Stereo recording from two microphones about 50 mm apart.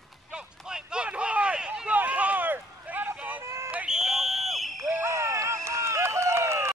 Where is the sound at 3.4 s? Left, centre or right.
Right.